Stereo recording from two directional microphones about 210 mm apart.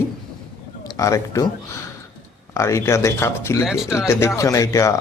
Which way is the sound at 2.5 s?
15° left (ahead or behind).